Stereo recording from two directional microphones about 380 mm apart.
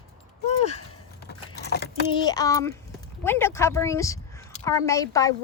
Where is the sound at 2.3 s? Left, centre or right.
Centre.